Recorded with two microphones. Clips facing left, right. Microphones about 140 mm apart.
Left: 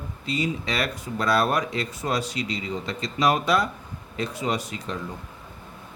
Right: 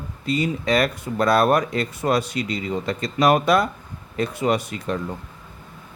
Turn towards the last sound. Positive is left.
turn(degrees=-55)  # may be behind; listen again after turning